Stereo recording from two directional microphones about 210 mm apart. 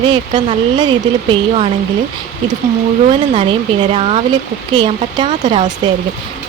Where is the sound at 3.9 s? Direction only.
30° right (ahead or behind).